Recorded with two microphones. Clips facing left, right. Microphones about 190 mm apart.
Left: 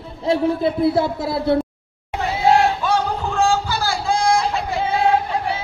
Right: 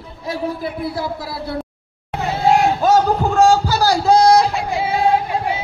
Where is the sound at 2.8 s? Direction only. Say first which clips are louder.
Right 6 dB; 40° right (ahead or behind).